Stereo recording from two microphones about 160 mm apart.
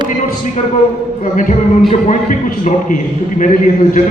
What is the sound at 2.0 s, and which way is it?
A man's voice, 55° left (ahead or behind).